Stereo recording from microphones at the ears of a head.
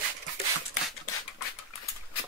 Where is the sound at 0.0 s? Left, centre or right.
Right.